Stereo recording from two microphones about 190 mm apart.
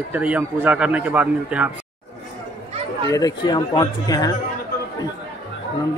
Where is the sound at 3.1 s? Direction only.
20° left (ahead or behind).